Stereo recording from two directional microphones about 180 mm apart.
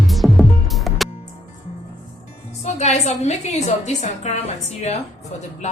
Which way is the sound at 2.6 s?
40° left (ahead or behind).